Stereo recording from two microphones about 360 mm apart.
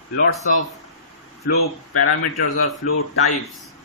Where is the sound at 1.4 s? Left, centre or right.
Left.